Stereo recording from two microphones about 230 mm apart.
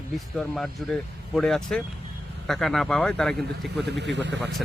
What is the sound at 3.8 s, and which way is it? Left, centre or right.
Speech, right.